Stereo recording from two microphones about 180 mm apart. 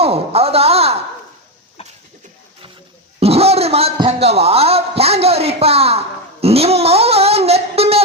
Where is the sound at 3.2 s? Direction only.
35° right (ahead or behind).